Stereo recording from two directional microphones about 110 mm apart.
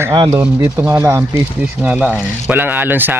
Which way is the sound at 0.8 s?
25° right (ahead or behind).